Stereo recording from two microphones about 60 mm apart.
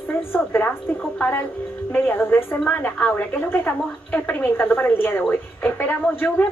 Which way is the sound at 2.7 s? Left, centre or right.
Left.